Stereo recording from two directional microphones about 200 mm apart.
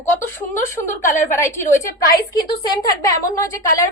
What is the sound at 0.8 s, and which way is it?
Speech, 20° left (ahead or behind).